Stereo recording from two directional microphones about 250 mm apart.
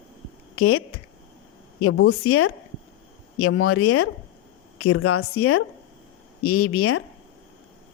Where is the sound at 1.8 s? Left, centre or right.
Left.